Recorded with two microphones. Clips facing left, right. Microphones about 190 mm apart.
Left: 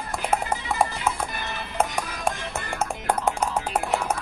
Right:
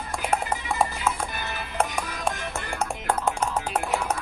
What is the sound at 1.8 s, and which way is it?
Music, 5° left (ahead or behind).